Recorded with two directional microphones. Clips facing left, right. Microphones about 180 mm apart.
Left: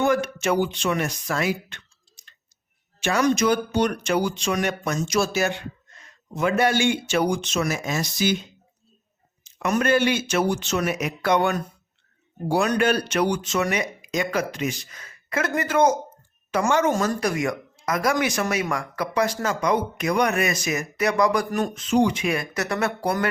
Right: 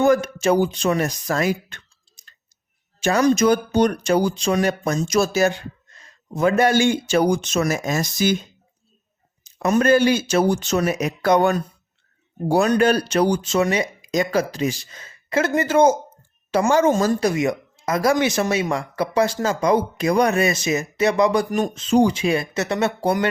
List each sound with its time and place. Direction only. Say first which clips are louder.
0.0 s speech: right 5 dB; 40° right (ahead or behind)
3.0 s speech: right 4 dB; 35° right (ahead or behind)
9.6 s speech: right 4 dB; 30° right (ahead or behind)
12.6 s speech: right 4 dB; 35° right (ahead or behind)
21.8 s speech: right 4 dB; 30° right (ahead or behind)